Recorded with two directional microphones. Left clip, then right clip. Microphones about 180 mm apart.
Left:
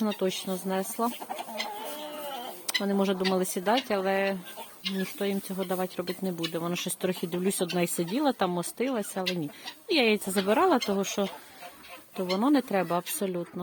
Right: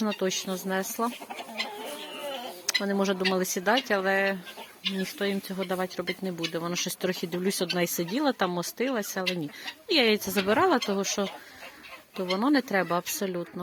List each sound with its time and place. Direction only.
0.0 s speech: 10° left (ahead or behind)
2.6 s speech: 10° left (ahead or behind)
12.4 s speech: 15° left (ahead or behind)